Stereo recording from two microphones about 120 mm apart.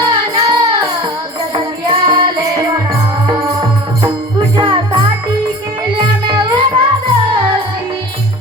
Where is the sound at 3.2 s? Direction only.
40° right (ahead or behind).